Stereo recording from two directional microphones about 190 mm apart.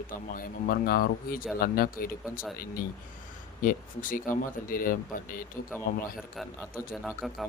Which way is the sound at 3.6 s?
45° left (ahead or behind).